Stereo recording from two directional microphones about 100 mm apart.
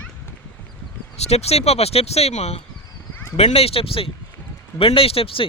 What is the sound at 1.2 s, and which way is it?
Speech, 90° left.